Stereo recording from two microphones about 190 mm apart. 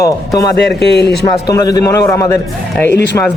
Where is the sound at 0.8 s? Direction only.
60° left (ahead or behind).